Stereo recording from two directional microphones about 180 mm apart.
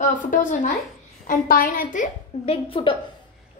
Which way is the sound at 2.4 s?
30° left (ahead or behind).